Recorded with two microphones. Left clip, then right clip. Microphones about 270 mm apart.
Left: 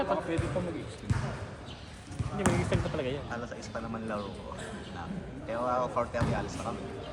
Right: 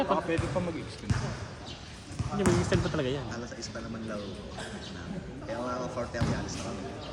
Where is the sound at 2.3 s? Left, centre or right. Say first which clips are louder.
Right 2 dB; right.